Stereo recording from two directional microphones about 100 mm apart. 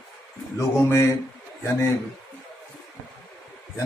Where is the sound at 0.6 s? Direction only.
30° left (ahead or behind).